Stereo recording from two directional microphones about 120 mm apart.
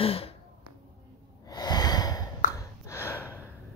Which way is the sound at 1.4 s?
35° left (ahead or behind).